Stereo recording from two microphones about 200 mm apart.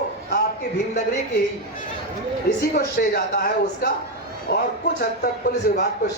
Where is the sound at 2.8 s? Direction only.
50° left (ahead or behind).